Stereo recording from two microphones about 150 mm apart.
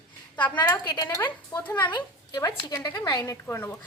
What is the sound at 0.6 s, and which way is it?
Speech, 20° left (ahead or behind).